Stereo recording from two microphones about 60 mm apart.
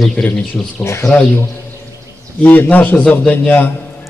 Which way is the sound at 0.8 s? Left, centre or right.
Left.